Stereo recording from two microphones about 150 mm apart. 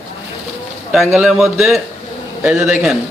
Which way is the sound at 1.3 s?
Centre (ahead or behind).